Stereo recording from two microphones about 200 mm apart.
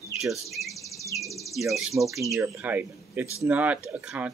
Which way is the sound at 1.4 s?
Centre (ahead or behind).